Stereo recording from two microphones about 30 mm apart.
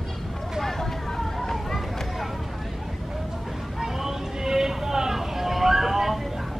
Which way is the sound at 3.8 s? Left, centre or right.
Centre.